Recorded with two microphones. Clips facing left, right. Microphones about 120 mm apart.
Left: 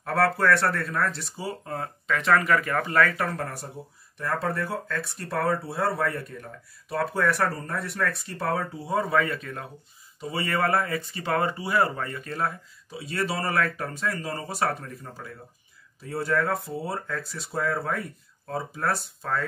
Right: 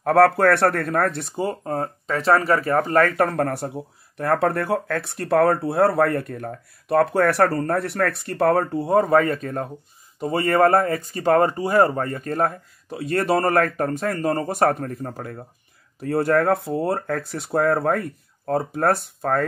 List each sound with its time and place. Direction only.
0.0 s speech: 55° right (ahead or behind)
1.6 s speech: 40° right (ahead or behind); by 19.4 s 55° right (ahead or behind)